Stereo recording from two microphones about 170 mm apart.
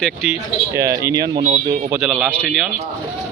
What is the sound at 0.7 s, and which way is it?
Speech, 20° right (ahead or behind).